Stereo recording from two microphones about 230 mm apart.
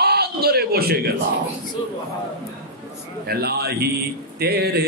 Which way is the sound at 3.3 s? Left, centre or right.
Right.